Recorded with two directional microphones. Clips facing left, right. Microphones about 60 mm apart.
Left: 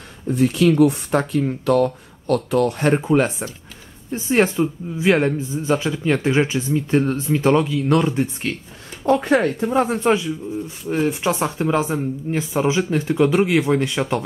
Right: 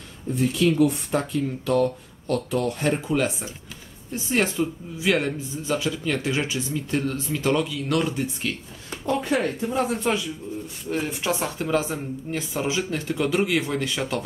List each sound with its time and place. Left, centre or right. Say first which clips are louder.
0.3 s speech: left 5 dB; left
3.1 s a man's voice: left 6 dB; left
9.0 s speech: left 7 dB; left
9.8 s a man's voice: left 6 dB; left
10.9 s speech: left 6 dB; left